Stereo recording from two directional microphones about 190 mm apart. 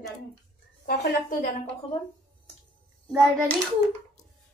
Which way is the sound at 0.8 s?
55° left (ahead or behind).